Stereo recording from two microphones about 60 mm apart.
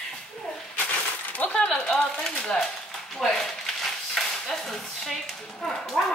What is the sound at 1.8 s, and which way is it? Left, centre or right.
Speech, centre.